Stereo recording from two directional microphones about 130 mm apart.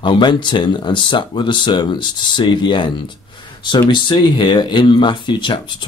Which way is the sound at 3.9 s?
35° left (ahead or behind).